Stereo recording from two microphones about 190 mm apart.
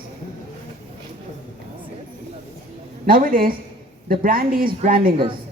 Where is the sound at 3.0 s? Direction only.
50° right (ahead or behind).